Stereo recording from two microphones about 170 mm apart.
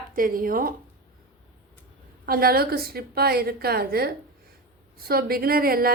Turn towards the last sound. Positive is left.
turn(degrees=-60)  # may be behind; listen again after turning